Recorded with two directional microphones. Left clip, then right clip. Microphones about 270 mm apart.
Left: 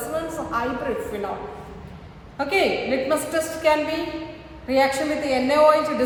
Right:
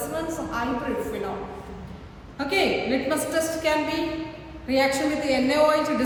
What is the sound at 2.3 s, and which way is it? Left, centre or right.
A woman's voice, left.